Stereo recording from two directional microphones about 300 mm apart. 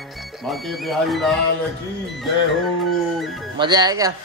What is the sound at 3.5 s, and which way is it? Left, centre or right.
Speech, centre.